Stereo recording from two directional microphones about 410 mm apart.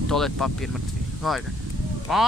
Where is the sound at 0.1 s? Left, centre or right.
Centre.